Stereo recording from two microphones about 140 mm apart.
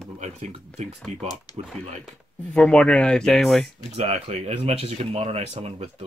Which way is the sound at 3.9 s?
45° right (ahead or behind).